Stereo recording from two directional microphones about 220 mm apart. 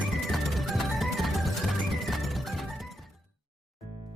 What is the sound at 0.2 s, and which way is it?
Music, centre (ahead or behind).